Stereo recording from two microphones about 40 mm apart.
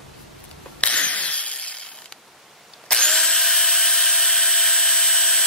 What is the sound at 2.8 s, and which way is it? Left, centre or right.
Drill, centre.